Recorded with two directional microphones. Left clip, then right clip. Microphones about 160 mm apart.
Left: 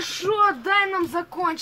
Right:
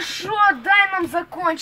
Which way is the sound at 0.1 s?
60° left (ahead or behind).